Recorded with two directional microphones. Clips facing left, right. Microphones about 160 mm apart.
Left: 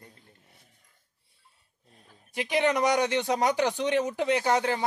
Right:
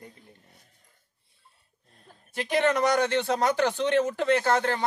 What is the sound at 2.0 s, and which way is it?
A man's voice, 15° left (ahead or behind).